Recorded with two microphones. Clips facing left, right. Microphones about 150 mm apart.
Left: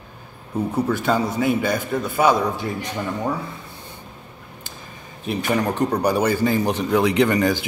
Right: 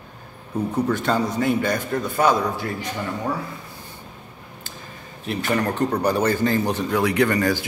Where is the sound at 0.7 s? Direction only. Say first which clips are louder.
Left 1 dB; 5° left (ahead or behind).